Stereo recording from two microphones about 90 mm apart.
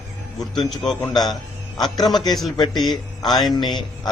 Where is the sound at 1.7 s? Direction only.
50° left (ahead or behind).